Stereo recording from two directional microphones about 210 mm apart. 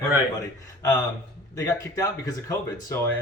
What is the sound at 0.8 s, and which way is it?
A man's voice, 15° left (ahead or behind).